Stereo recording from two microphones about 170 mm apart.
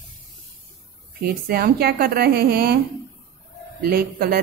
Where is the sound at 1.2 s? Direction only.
65° right (ahead or behind).